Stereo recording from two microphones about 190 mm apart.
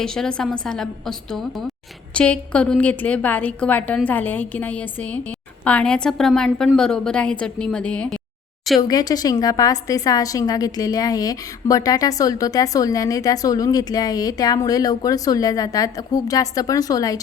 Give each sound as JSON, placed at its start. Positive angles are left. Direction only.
{"t": 0.0, "sound": "a woman's voice", "side_deg": 5}
{"t": 8.8, "sound": "a woman's voice", "side_deg": 20}